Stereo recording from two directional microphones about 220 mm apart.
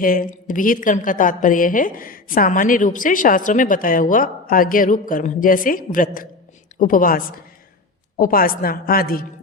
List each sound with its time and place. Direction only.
0.0 s a woman's voice: 40° left (ahead or behind)